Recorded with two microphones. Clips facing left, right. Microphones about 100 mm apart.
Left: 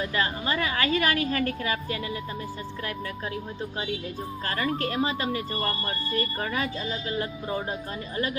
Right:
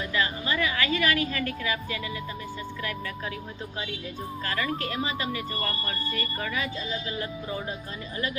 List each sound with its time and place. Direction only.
0.1 s speech: 40° left (ahead or behind)
4.4 s speech: 40° left (ahead or behind)